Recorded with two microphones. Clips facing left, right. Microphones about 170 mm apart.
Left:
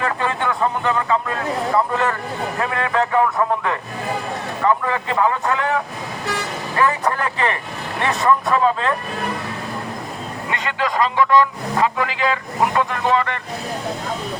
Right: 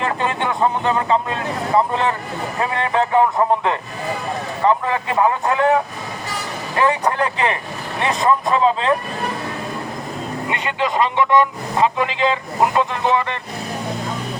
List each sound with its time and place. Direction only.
0.0 s a man's voice: 25° right (ahead or behind)
6.7 s a man's voice: 20° right (ahead or behind)
10.5 s a man's voice: 20° right (ahead or behind)